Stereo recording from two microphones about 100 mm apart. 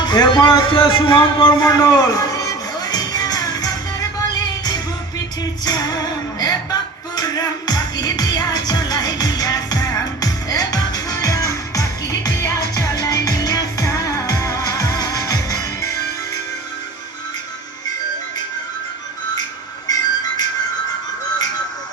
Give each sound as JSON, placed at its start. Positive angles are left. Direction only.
{"t": 0.0, "sound": "speech", "side_deg": 45}
{"t": 1.5, "sound": "music", "side_deg": 40}
{"t": 5.6, "sound": "speech", "side_deg": 45}
{"t": 7.2, "sound": "music", "side_deg": 45}
{"t": 19.9, "sound": "music", "side_deg": 40}